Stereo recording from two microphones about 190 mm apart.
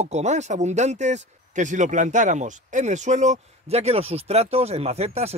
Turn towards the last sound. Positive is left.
turn(degrees=-35)  # may be behind; listen again after turning